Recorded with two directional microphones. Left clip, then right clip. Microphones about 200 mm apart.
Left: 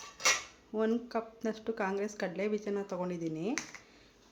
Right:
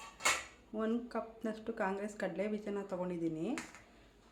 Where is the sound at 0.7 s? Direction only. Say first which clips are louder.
Left 6 dB; 20° left (ahead or behind).